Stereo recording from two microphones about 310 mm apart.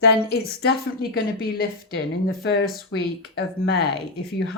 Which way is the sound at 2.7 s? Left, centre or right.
Left.